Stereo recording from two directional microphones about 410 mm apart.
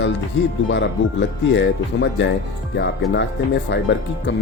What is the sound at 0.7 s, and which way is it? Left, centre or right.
Speech, left.